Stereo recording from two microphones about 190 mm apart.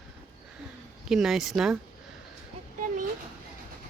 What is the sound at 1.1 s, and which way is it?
Speech, centre (ahead or behind).